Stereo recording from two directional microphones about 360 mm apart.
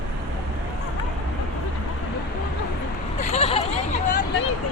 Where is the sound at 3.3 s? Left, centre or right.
Centre.